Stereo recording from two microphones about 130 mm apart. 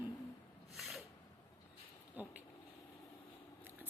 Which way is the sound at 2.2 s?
10° right (ahead or behind).